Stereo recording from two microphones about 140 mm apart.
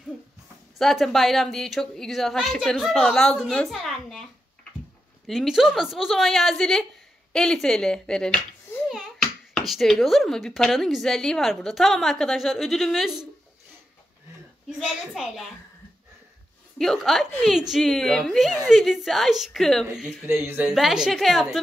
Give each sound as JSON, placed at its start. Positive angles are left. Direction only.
{"t": 0.7, "sound": "a woman's voice", "side_deg": 0}
{"t": 14.7, "sound": "a woman's voice", "side_deg": -5}
{"t": 16.7, "sound": "a woman's voice", "side_deg": 0}
{"t": 20.2, "sound": "speech", "side_deg": -15}
{"t": 20.6, "sound": "a woman's voice", "side_deg": -5}